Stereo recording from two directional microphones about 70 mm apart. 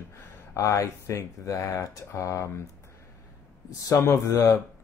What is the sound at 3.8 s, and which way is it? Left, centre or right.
Speech, left.